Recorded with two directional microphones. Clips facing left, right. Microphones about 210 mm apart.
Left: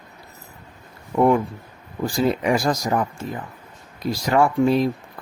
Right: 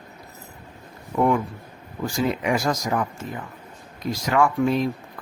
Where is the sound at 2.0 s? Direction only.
35° left (ahead or behind).